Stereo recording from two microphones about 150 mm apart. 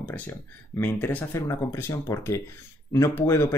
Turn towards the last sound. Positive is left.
turn(degrees=15)  # may be behind; listen again after turning